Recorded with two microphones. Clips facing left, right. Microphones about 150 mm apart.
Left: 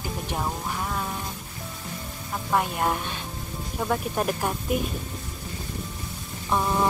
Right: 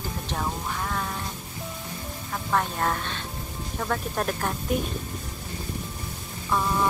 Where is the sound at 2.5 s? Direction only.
15° left (ahead or behind).